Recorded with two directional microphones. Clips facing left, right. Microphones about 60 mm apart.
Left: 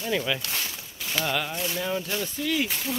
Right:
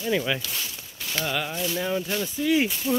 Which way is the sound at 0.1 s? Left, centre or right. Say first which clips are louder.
Right 2 dB; centre.